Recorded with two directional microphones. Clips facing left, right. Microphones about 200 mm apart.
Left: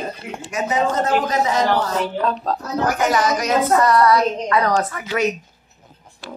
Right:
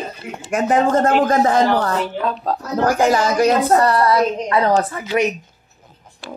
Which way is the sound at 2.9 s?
30° right (ahead or behind).